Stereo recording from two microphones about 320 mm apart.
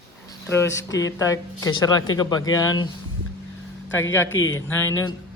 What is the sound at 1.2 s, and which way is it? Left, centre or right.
Speech, centre.